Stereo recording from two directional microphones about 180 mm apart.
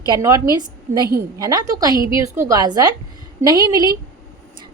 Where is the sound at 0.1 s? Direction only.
20° right (ahead or behind).